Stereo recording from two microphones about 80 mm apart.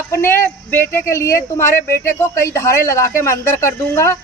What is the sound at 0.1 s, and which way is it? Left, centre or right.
A woman's voice, left.